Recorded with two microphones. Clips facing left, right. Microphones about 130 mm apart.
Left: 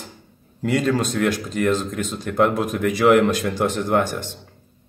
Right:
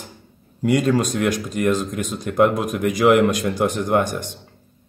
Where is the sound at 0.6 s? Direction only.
15° right (ahead or behind).